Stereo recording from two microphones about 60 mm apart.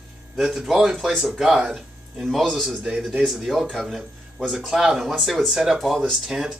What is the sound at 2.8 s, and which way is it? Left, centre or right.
Speech, centre.